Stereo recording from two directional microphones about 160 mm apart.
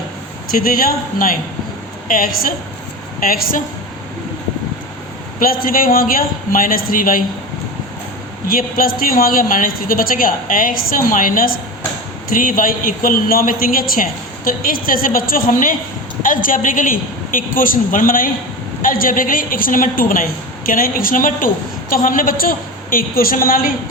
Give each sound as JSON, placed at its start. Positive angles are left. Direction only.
{"t": 0.5, "sound": "speech", "side_deg": 65}
{"t": 5.4, "sound": "speech", "side_deg": 60}
{"t": 8.4, "sound": "speech", "side_deg": 65}